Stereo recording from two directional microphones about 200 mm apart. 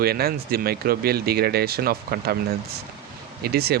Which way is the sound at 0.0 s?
50° right (ahead or behind).